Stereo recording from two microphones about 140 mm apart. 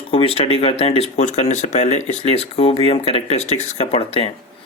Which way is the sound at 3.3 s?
55° left (ahead or behind).